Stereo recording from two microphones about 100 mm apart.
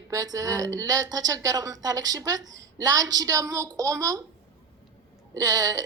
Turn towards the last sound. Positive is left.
turn(degrees=-40)  # may be behind; listen again after turning